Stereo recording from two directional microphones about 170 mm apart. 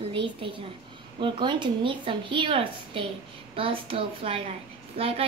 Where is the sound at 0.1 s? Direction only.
30° right (ahead or behind).